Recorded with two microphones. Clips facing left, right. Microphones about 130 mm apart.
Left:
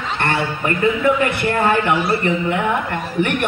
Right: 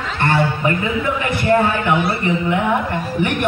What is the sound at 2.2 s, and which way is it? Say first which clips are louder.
A man's voice: even; 55° left (ahead or behind).